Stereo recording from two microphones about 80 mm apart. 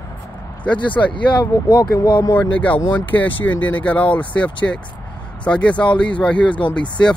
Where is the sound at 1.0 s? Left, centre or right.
Left.